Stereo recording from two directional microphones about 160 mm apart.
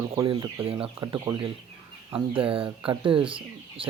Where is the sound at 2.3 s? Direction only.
35° right (ahead or behind).